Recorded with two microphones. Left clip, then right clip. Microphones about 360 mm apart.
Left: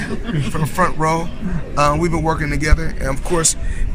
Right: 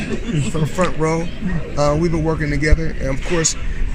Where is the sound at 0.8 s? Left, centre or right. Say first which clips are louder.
Left 2 dB; left.